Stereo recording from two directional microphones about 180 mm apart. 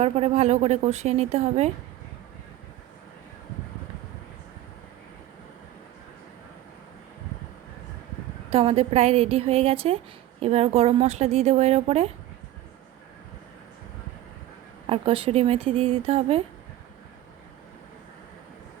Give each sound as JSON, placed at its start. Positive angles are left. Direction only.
{"t": 0.0, "sound": "a woman's voice", "side_deg": -35}
{"t": 8.4, "sound": "a woman's voice", "side_deg": -30}
{"t": 14.8, "sound": "a woman's voice", "side_deg": -30}